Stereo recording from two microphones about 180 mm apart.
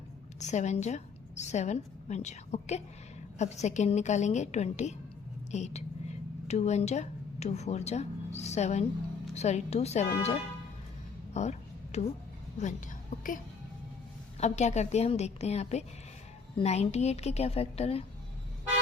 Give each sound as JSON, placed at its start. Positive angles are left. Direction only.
{"t": 0.3, "sound": "a woman's voice", "side_deg": 40}
{"t": 11.3, "sound": "a sound", "side_deg": 40}
{"t": 12.5, "sound": "a woman's voice", "side_deg": 45}